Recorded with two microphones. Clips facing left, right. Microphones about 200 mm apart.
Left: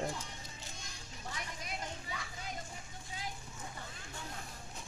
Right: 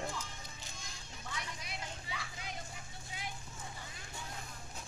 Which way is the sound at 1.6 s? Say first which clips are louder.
Left 3 dB; 45° left (ahead or behind).